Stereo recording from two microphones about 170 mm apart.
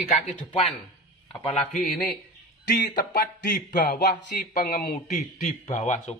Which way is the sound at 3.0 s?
50° left (ahead or behind).